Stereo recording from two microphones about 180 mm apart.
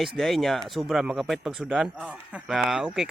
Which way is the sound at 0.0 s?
Centre (ahead or behind).